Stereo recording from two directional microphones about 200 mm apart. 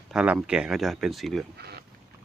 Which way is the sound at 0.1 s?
5° right (ahead or behind).